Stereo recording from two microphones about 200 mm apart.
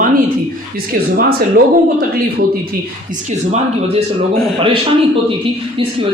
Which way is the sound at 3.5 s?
30° right (ahead or behind).